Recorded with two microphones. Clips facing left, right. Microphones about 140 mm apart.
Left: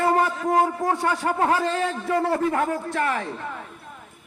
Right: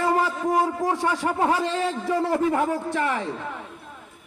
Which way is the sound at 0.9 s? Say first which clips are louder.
Left 1 dB; 10° right (ahead or behind).